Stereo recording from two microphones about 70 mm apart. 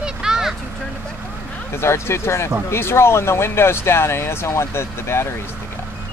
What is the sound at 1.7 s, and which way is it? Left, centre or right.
Speech, left.